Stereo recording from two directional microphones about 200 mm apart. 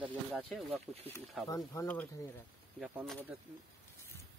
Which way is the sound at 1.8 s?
5° left (ahead or behind).